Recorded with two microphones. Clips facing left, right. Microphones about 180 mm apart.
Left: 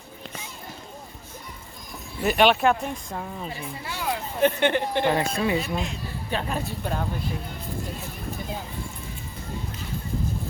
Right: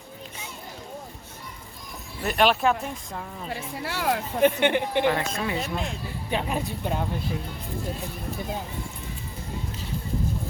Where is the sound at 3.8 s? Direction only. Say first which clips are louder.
Right 4 dB; 75° right (ahead or behind).